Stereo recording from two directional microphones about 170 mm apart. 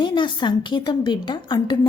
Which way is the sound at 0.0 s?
25° left (ahead or behind).